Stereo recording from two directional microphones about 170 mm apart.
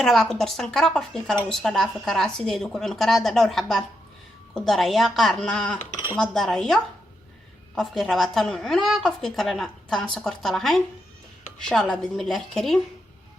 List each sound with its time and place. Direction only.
0.0 s a woman's voice: centre (ahead or behind)
7.8 s a woman's voice: centre (ahead or behind)